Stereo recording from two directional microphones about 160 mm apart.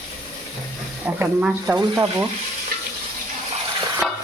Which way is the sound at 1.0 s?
10° right (ahead or behind).